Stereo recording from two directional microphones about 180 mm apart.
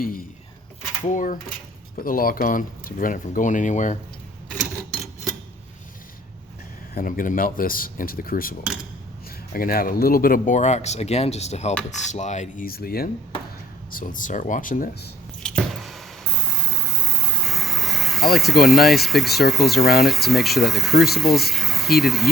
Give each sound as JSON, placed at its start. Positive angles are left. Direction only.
{"t": 1.0, "sound": "speech", "side_deg": 45}
{"t": 6.9, "sound": "speech", "side_deg": 50}
{"t": 15.4, "sound": "a sound", "side_deg": 0}
{"t": 20.0, "sound": "speech", "side_deg": 0}